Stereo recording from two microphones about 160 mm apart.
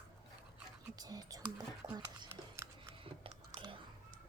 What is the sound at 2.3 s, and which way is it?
Scissors, 15° right (ahead or behind).